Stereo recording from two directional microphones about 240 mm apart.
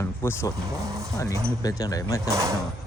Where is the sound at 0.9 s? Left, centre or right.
Centre.